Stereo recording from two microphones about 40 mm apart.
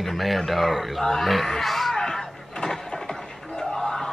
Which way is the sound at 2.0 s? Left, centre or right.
Centre.